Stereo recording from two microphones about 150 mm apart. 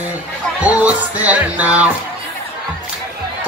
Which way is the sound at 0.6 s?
10° right (ahead or behind).